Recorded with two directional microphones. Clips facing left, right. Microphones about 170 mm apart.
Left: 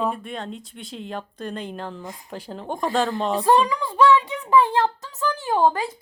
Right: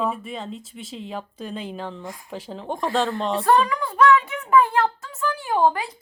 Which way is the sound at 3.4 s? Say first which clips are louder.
Even; 20° left (ahead or behind).